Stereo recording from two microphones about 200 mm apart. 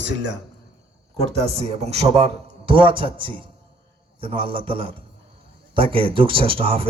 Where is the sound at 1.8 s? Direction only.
30° right (ahead or behind).